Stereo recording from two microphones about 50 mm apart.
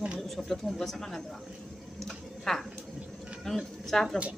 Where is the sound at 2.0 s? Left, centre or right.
Centre.